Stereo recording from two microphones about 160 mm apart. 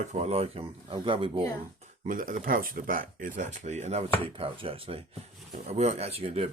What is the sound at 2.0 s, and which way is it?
Speech, 55° right (ahead or behind).